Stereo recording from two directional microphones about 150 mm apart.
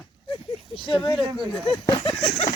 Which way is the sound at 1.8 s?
30° left (ahead or behind).